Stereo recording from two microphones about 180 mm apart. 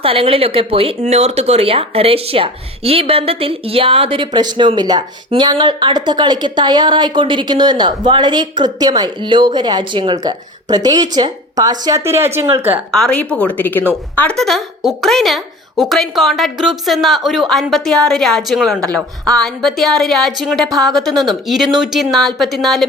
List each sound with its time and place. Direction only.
0.0 s speech: 30° right (ahead or behind); by 12.8 s 10° right (ahead or behind)
12.9 s a woman's voice: 5° left (ahead or behind)